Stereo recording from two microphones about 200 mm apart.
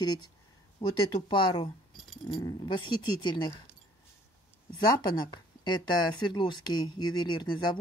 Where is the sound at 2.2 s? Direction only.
20° left (ahead or behind).